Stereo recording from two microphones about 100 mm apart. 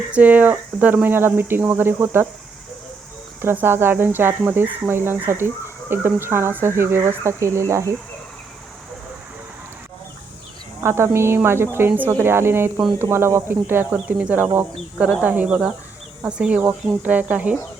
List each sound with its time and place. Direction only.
0.1 s speech: 15° right (ahead or behind)
3.4 s speech: 20° right (ahead or behind)
10.8 s speech: 25° right (ahead or behind)